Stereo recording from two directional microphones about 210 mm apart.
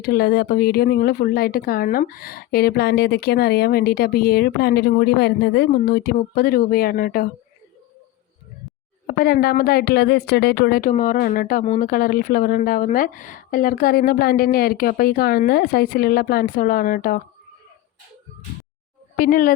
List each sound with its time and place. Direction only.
0.0 s a woman's voice: 45° left (ahead or behind)
9.0 s a woman's voice: 45° left (ahead or behind)
19.1 s a woman's voice: 45° left (ahead or behind)